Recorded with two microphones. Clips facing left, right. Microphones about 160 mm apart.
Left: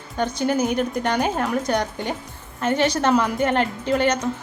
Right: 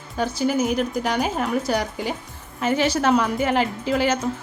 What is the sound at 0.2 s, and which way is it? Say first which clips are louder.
A woman's voice: even; 5° right (ahead or behind).